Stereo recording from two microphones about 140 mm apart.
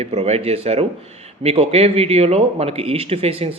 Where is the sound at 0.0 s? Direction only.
50° right (ahead or behind).